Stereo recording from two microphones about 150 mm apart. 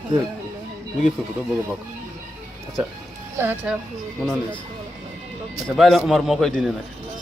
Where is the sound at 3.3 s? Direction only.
15° right (ahead or behind).